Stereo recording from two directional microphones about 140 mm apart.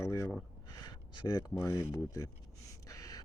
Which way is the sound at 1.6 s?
20° left (ahead or behind).